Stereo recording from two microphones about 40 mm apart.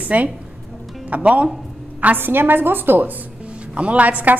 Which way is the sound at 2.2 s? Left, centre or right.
Right.